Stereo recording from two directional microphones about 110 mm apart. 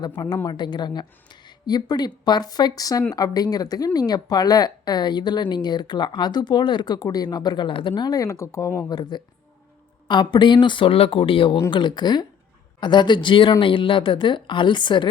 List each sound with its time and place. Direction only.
0.0 s speech: 40° left (ahead or behind)
8.9 s speech: 40° left (ahead or behind)